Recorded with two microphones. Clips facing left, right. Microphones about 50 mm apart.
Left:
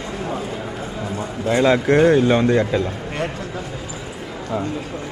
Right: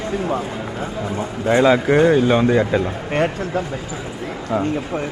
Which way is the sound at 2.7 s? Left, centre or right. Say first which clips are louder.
Right 2 dB; right.